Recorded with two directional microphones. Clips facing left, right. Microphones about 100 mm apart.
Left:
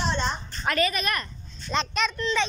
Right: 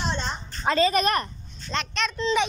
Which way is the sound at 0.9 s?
35° right (ahead or behind).